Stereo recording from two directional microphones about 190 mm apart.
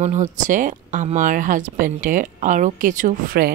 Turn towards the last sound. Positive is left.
turn(degrees=-45)  # may be behind; listen again after turning